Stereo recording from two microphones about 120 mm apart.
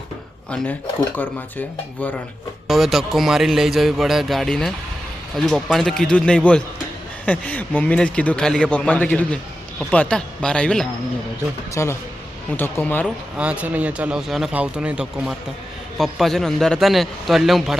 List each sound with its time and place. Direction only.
0.5 s a man's voice: 10° left (ahead or behind)
2.6 s a man's voice: centre (ahead or behind)
11.7 s a man's voice: 25° left (ahead or behind)
13.3 s speech: 10° right (ahead or behind)
16.0 s a man's voice: centre (ahead or behind)